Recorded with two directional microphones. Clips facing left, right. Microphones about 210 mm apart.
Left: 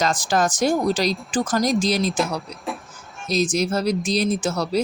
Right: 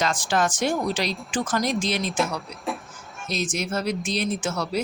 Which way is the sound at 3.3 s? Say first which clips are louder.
Left 6 dB; 35° left (ahead or behind).